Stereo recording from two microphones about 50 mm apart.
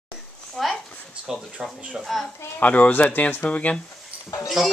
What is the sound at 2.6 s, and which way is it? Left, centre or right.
Speech, left.